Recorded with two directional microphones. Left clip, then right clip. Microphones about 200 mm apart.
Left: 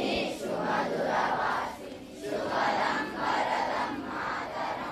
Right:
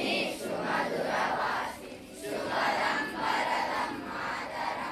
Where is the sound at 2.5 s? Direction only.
50° left (ahead or behind).